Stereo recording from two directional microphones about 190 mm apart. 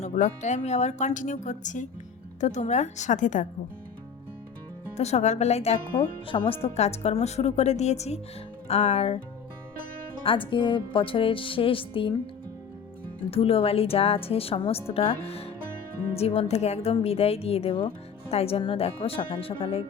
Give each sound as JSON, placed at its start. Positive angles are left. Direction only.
{"t": 0.0, "sound": "a woman's voice", "side_deg": 40}
{"t": 4.9, "sound": "a woman's voice", "side_deg": 35}
{"t": 10.2, "sound": "speech", "side_deg": 25}
{"t": 13.3, "sound": "a woman's voice", "side_deg": 30}